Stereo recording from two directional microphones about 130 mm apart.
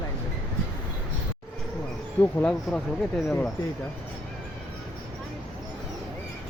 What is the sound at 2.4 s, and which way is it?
Speech, 5° left (ahead or behind).